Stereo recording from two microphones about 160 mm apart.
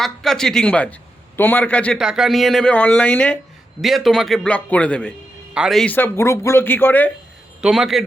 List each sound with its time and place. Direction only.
0.0 s a man's voice: centre (ahead or behind)
2.0 s a man's voice: 5° right (ahead or behind)
7.6 s a man's voice: centre (ahead or behind)